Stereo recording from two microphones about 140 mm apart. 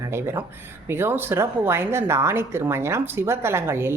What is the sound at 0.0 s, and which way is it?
A woman's voice, 20° right (ahead or behind).